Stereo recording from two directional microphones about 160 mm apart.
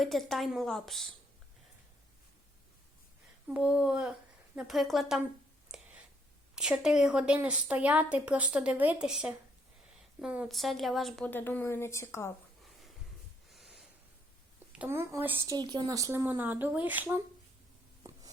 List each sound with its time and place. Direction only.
0.0 s speech: centre (ahead or behind)
3.5 s speech: 5° right (ahead or behind)
6.6 s a woman's voice: 5° right (ahead or behind)
11.3 s speech: 10° left (ahead or behind)
13.5 s snort: centre (ahead or behind)
14.8 s a woman's voice: 15° right (ahead or behind)
15.5 s a woman's voice: 25° right (ahead or behind)